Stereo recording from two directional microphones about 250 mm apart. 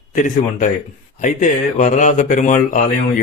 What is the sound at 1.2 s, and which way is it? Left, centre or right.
A man's voice, left.